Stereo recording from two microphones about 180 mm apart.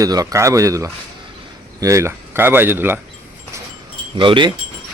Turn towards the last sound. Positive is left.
turn(degrees=-25)  # may be behind; listen again after turning